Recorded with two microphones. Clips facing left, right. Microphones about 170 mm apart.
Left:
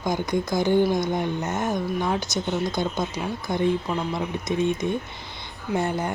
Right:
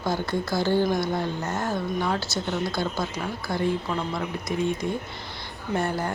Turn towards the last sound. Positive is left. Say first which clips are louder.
# left 1 dB
turn(degrees=20)  # may be behind; listen again after turning